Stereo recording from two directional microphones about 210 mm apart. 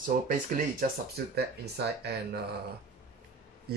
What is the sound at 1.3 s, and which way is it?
Speech, 50° right (ahead or behind).